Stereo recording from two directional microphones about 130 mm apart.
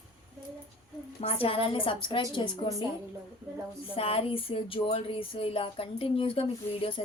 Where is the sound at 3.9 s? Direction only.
45° left (ahead or behind).